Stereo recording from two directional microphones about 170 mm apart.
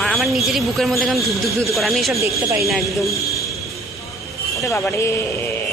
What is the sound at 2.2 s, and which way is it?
Speech, 15° right (ahead or behind).